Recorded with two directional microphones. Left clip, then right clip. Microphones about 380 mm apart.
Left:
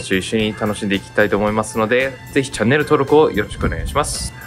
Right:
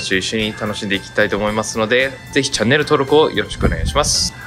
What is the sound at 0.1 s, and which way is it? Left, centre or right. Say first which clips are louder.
Speech: left 1 dB; centre.